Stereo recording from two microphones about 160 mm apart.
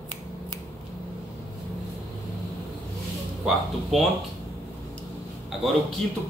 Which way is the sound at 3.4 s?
Centre (ahead or behind).